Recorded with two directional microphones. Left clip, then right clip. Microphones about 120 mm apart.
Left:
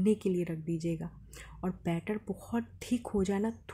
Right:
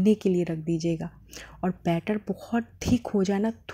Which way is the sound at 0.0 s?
25° right (ahead or behind).